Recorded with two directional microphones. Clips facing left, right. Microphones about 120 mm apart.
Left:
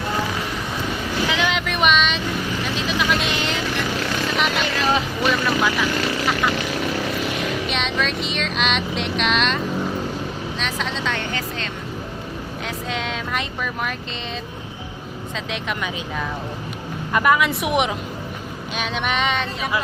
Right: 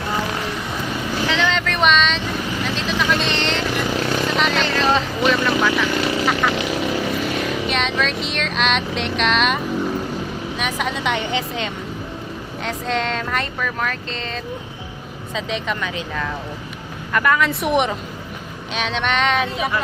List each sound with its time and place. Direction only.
1.3 s vehicle: 15° left (ahead or behind)
7.7 s vehicle: centre (ahead or behind)
10.6 s speech: 10° right (ahead or behind)
12.6 s speech: 5° left (ahead or behind)
15.4 s vehicle: centre (ahead or behind)
17.1 s speech: 15° left (ahead or behind)
17.6 s vehicle: 5° left (ahead or behind)